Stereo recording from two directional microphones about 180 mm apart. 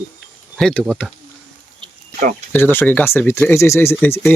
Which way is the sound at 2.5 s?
10° left (ahead or behind).